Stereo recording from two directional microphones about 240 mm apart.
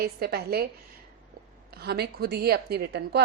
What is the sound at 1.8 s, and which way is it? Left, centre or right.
A woman's voice, right.